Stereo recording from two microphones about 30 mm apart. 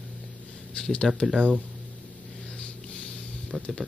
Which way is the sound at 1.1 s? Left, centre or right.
Centre.